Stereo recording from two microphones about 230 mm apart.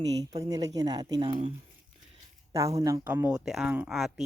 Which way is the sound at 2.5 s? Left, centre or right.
Centre.